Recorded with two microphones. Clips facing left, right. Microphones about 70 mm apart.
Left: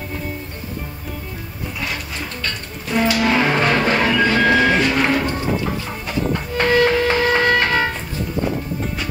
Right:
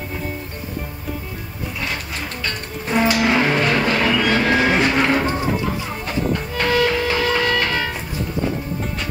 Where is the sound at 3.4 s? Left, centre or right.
Left.